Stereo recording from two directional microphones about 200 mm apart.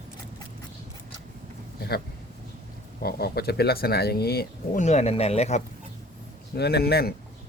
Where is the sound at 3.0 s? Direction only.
50° left (ahead or behind); by 5.6 s 35° left (ahead or behind).